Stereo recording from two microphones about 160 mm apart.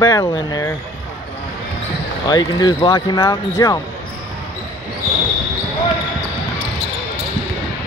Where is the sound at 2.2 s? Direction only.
25° left (ahead or behind).